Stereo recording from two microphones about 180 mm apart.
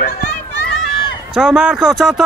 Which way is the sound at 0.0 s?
60° left (ahead or behind).